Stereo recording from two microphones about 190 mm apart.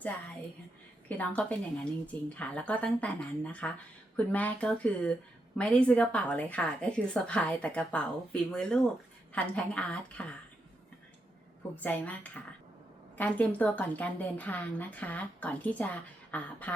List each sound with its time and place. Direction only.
1.0 s a woman's voice: 10° left (ahead or behind)
11.8 s a woman's voice: 10° left (ahead or behind)